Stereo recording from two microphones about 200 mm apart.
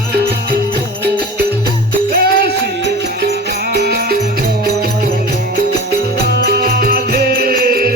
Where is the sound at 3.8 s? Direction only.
50° right (ahead or behind).